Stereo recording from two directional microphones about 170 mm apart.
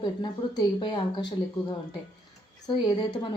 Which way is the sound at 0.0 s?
25° left (ahead or behind).